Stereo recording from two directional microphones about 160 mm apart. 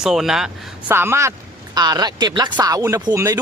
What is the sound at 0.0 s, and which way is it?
Speech, 5° right (ahead or behind).